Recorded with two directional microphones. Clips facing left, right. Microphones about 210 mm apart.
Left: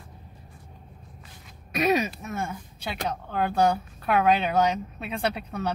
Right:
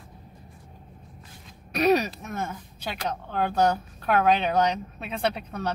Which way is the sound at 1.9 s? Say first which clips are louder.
Right 3 dB; centre (ahead or behind).